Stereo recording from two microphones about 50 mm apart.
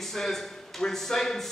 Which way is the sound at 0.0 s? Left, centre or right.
Centre.